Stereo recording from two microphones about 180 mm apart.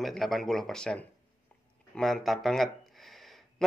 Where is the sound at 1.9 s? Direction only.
Centre (ahead or behind).